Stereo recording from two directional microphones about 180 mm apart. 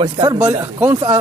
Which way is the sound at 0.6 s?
15° right (ahead or behind).